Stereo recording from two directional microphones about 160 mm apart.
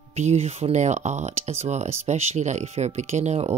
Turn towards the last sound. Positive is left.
turn(degrees=-45)  # may be behind; listen again after turning